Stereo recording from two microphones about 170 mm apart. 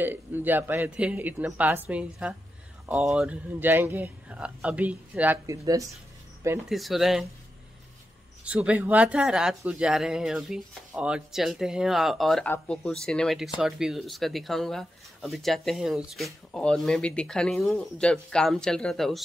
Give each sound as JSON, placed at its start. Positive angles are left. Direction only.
{"t": 0.0, "sound": "a man's voice", "side_deg": -10}
{"t": 6.7, "sound": "speech", "side_deg": 0}
{"t": 8.5, "sound": "a man's voice", "side_deg": -10}